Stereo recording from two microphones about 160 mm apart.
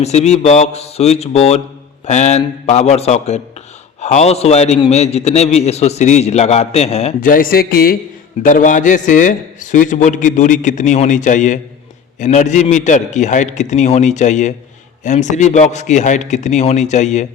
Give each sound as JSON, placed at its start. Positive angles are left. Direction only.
{"t": 0.0, "sound": "a man's voice", "side_deg": 45}
{"t": 7.2, "sound": "speech", "side_deg": 60}
{"t": 8.4, "sound": "a man's voice", "side_deg": 55}